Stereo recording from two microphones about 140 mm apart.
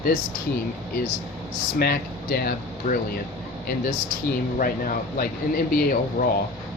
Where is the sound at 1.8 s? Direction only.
90° left.